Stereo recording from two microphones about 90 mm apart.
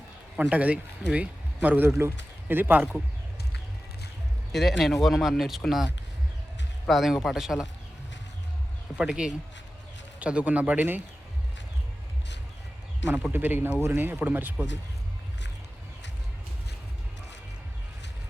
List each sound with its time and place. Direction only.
0.3 s a man's voice: 15° right (ahead or behind)
4.5 s speech: centre (ahead or behind)
9.0 s speech: 10° right (ahead or behind)
13.3 s speech: 25° right (ahead or behind)